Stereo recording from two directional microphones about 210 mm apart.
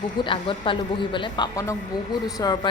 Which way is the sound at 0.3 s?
25° left (ahead or behind).